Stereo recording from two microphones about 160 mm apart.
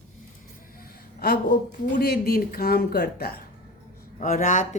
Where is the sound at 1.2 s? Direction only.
65° left (ahead or behind).